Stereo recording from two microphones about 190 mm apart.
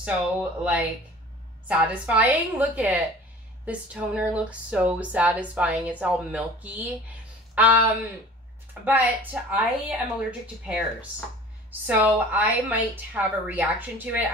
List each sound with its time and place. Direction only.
0.0 s speech: 5° right (ahead or behind)
8.8 s speech: 10° right (ahead or behind)